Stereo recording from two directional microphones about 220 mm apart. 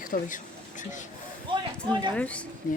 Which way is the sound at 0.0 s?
35° left (ahead or behind).